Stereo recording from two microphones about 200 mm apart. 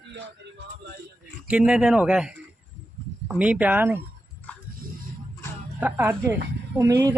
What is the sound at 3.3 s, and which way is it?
Speech, 5° right (ahead or behind).